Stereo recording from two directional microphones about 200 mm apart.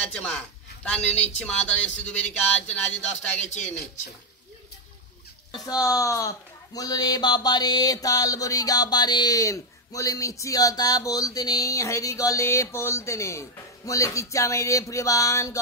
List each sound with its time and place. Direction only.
0.1 s a man's voice: 5° left (ahead or behind)
3.3 s speech: 35° left (ahead or behind)
5.5 s speech: 20° left (ahead or behind)